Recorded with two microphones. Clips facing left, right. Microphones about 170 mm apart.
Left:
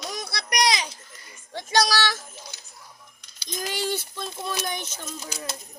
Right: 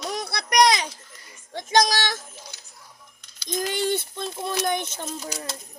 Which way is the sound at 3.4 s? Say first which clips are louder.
Right 4 dB; 50° right (ahead or behind).